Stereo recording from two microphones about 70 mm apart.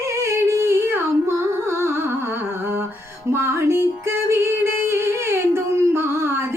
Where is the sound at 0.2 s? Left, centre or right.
Right.